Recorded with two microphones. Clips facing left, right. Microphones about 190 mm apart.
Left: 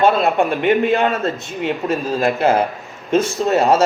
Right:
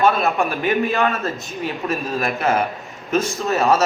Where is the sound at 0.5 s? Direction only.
25° left (ahead or behind).